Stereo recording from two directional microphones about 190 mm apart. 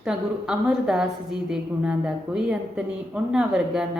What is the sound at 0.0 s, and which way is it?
Speech, 5° right (ahead or behind).